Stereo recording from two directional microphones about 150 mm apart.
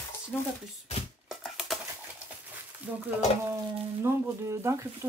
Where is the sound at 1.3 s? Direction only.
5° right (ahead or behind).